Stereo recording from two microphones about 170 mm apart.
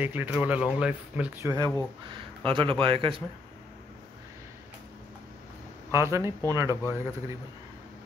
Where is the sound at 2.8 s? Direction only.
30° right (ahead or behind).